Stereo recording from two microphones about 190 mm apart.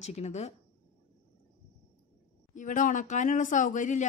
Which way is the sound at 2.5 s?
45° left (ahead or behind).